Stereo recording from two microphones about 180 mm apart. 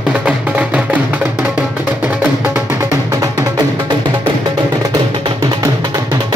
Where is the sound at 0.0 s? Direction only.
5° right (ahead or behind).